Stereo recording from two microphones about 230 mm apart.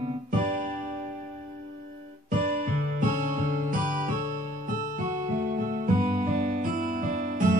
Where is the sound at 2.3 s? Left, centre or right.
Right.